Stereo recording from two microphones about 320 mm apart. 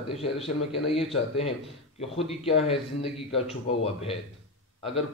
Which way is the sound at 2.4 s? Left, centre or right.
Centre.